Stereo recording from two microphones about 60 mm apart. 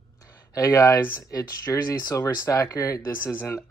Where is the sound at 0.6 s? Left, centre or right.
Left.